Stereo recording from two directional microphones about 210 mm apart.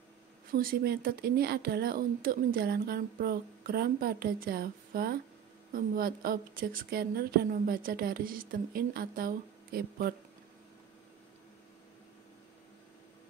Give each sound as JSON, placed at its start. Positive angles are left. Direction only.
{"t": 0.5, "sound": "speech", "side_deg": -45}